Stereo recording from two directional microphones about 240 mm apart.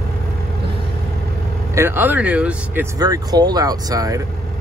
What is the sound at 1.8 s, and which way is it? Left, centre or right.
Speech, centre.